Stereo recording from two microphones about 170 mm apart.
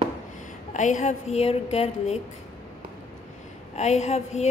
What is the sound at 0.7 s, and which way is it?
Speech, 45° left (ahead or behind).